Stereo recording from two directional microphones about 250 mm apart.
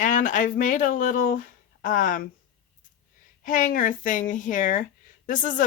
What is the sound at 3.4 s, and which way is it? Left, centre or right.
Speech, left.